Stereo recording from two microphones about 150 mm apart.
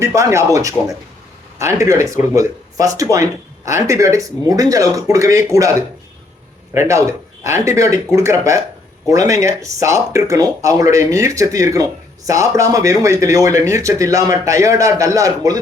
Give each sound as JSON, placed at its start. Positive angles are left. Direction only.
{"t": 0.0, "sound": "speech", "side_deg": -20}
{"t": 6.7, "sound": "speech", "side_deg": -20}